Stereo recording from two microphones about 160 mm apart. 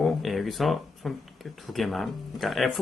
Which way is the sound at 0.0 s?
Centre (ahead or behind).